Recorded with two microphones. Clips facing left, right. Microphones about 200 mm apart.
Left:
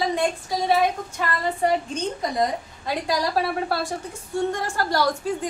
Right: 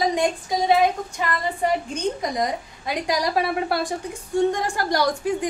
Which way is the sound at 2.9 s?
15° right (ahead or behind).